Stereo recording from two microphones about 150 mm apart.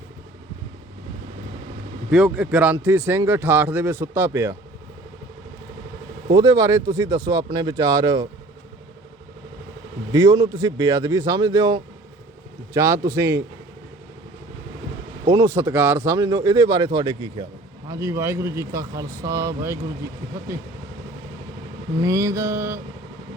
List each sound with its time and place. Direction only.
2.0 s a man's voice: 5° right (ahead or behind)
6.3 s speech: 25° right (ahead or behind)
10.1 s speech: 25° right (ahead or behind)
15.3 s speech: 20° right (ahead or behind)
17.8 s speech: 20° right (ahead or behind)
22.0 s speech: 20° right (ahead or behind)